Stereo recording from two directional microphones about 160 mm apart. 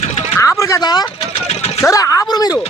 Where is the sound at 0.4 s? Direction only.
20° left (ahead or behind).